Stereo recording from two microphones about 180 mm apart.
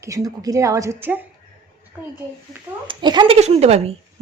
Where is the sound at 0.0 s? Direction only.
20° right (ahead or behind).